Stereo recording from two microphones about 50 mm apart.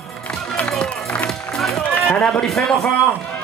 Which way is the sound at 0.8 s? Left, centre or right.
Left.